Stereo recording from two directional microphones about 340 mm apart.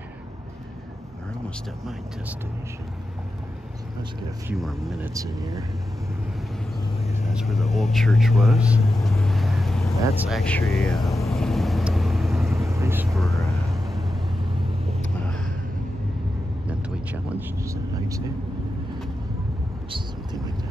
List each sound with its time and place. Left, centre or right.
4.5 s speech: centre
7.2 s speech: centre
9.9 s vehicle: centre
15.0 s vehicle: centre
16.6 s vehicle: centre